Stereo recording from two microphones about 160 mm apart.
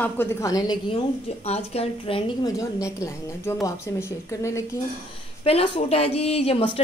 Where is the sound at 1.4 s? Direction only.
40° left (ahead or behind).